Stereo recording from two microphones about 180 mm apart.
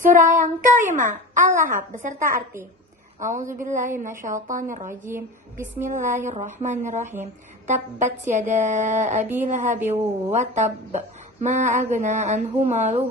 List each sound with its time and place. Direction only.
0.0 s speech: 45° right (ahead or behind)
5.0 s a woman's voice: 15° right (ahead or behind)
5.8 s speech: 45° right (ahead or behind)